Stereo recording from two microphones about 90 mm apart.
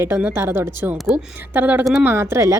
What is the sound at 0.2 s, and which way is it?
A woman's voice, 25° right (ahead or behind).